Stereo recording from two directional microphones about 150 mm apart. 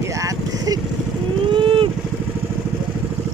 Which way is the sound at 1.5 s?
35° right (ahead or behind).